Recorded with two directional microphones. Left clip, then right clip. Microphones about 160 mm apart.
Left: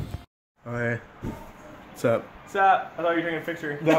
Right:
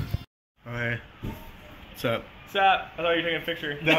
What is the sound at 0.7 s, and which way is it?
Speech, 30° left (ahead or behind).